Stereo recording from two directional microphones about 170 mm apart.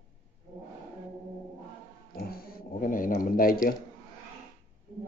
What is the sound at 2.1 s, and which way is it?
Dog, 60° left (ahead or behind).